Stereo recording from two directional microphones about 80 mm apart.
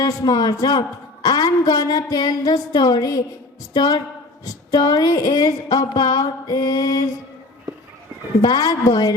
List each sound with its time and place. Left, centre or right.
0.0 s a woman's voice: left
4.7 s a sound: left
8.4 s a woman's voice: left